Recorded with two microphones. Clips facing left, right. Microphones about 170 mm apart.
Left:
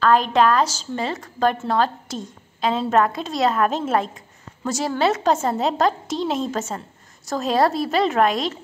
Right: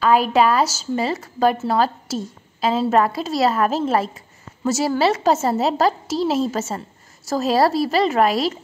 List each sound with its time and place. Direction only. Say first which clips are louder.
0.0 s a woman's voice: right 1 dB; 10° right (ahead or behind)